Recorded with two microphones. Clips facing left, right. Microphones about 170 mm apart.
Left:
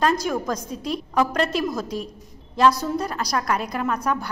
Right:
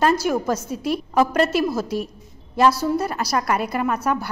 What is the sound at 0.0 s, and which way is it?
A woman's voice, 5° right (ahead or behind).